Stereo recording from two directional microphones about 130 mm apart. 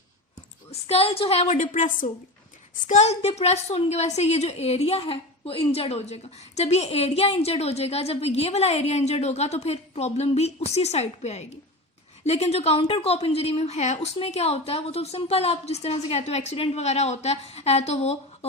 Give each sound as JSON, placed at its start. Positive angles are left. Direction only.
{"t": 0.7, "sound": "a woman's voice", "side_deg": 50}
{"t": 1.5, "sound": "a woman's voice", "side_deg": 75}
{"t": 2.8, "sound": "a woman's voice", "side_deg": 65}